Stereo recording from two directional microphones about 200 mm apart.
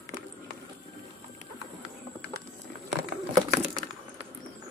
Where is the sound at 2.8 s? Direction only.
35° right (ahead or behind).